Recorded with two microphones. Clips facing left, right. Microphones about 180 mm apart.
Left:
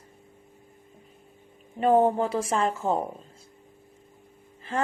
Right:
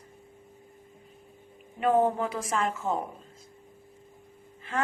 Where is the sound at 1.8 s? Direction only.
35° left (ahead or behind).